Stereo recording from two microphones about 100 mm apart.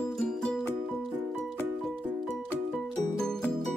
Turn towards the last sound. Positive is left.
turn(degrees=5)  # may be behind; listen again after turning